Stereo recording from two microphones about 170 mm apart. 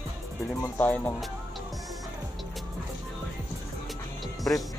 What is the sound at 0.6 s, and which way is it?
Speech, 10° left (ahead or behind).